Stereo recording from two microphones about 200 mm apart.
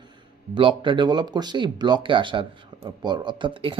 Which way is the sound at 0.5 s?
25° right (ahead or behind).